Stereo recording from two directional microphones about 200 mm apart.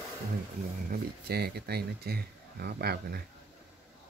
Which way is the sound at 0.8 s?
50° right (ahead or behind).